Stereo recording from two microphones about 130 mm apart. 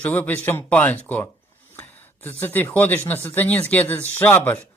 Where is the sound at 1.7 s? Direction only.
15° left (ahead or behind).